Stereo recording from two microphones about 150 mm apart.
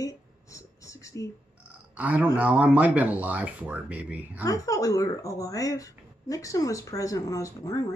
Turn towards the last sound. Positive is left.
turn(degrees=20)  # may be behind; listen again after turning